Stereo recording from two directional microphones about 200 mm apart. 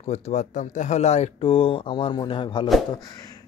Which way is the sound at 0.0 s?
35° left (ahead or behind).